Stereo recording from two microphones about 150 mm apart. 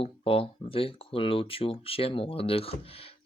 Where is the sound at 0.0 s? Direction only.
40° left (ahead or behind).